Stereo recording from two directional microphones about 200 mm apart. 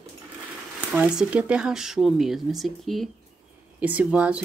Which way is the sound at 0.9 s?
5° right (ahead or behind).